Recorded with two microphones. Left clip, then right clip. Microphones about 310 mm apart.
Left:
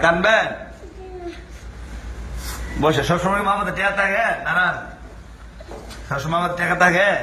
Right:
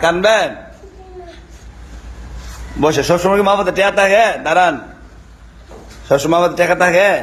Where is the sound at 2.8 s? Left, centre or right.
Centre.